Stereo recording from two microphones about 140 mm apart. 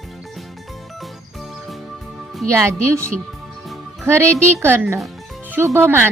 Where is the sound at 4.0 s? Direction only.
20° right (ahead or behind).